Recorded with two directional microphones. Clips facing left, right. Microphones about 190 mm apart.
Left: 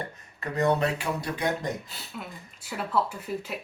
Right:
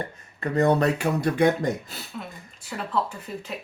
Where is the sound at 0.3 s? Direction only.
35° right (ahead or behind).